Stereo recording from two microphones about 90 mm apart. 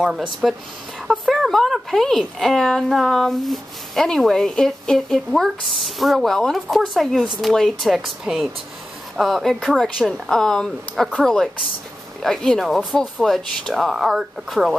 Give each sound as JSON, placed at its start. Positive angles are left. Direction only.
{"t": 0.0, "sound": "a woman's voice", "side_deg": -5}